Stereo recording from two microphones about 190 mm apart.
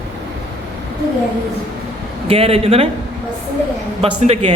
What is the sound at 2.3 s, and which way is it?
Speech, 30° right (ahead or behind).